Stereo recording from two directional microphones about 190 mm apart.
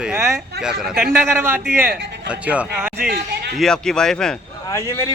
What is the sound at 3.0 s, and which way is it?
Speech, 55° right (ahead or behind).